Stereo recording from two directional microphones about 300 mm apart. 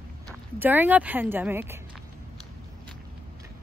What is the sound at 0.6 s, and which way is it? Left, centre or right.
Speech, centre.